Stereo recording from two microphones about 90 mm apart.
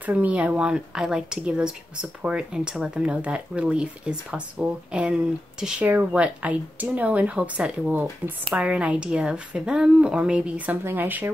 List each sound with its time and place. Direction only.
0.0 s speech: 15° right (ahead or behind)